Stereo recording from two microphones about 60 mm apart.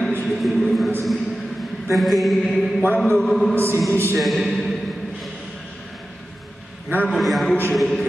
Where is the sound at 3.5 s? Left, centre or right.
Right.